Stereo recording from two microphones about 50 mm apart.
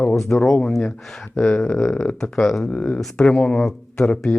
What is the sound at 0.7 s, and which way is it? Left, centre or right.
Speech, centre.